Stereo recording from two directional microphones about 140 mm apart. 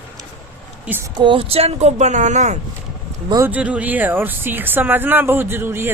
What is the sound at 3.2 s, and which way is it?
Speech, 25° right (ahead or behind).